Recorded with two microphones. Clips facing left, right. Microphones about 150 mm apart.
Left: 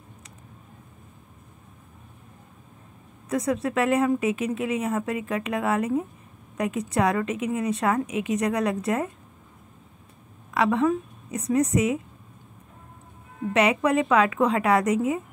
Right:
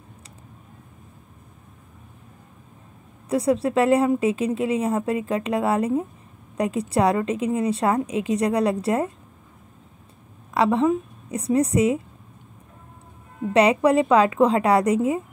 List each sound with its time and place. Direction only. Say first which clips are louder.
3.3 s speech: right 4 dB; 30° right (ahead or behind)
10.5 s a woman's voice: right 3 dB; 30° right (ahead or behind)
13.5 s speech: right 4 dB; 35° right (ahead or behind)